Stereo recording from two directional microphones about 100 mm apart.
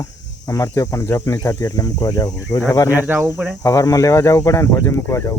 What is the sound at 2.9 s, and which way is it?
Speech, 20° right (ahead or behind).